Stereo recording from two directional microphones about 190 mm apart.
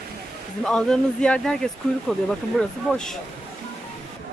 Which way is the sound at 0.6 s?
5° left (ahead or behind).